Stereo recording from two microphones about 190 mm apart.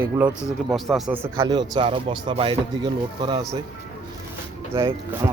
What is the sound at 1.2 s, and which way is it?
Speech, 15° right (ahead or behind).